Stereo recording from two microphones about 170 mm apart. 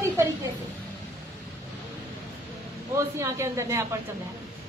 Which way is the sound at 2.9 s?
15° right (ahead or behind).